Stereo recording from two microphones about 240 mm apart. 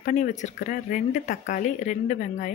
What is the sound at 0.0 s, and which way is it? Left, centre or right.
Speech, left.